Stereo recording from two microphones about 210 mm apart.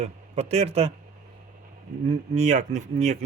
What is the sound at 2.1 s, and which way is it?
Speech, 35° right (ahead or behind).